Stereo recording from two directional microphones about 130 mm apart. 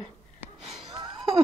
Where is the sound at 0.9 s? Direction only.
30° right (ahead or behind).